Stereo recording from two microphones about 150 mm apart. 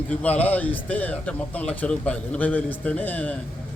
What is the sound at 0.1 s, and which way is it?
A man's voice, 10° left (ahead or behind).